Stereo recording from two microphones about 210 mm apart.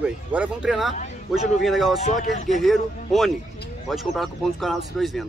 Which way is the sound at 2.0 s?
35° left (ahead or behind).